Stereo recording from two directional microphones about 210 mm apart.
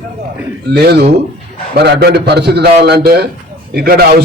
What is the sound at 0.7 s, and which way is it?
A man's voice, 50° right (ahead or behind).